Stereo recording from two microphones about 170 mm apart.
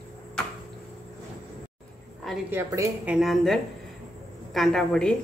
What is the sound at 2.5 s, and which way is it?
Speech, 15° right (ahead or behind).